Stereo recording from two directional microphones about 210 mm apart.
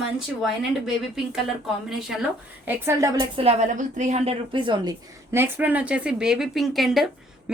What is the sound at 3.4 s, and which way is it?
A woman's voice, 30° right (ahead or behind).